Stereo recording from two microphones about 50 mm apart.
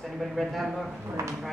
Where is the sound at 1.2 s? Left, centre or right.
Right.